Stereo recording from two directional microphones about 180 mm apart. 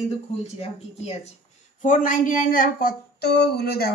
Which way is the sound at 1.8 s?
45° left (ahead or behind).